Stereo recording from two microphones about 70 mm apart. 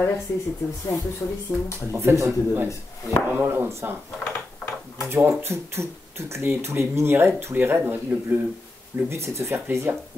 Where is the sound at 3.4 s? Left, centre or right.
Right.